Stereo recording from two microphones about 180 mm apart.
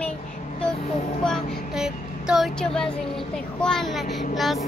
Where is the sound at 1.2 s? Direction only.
Centre (ahead or behind).